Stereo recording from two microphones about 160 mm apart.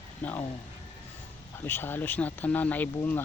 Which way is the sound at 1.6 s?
15° left (ahead or behind).